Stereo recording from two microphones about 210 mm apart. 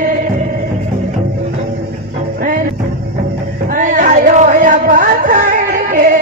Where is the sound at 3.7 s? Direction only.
40° right (ahead or behind).